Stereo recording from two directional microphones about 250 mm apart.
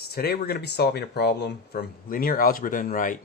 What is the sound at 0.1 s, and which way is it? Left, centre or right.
Speech, left.